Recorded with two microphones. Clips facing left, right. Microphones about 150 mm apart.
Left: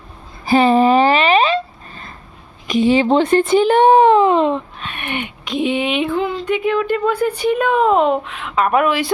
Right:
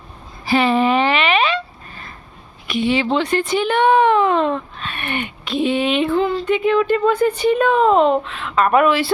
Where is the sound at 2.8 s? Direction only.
40° left (ahead or behind).